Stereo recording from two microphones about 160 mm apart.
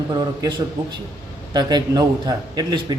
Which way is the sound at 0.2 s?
25° right (ahead or behind).